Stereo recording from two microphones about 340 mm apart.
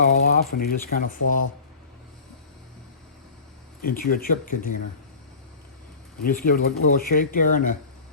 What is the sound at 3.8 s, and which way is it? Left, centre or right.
Speech, left.